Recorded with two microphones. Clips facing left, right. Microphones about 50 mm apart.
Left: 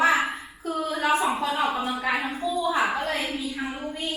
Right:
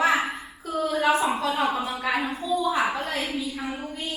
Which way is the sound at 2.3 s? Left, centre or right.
Centre.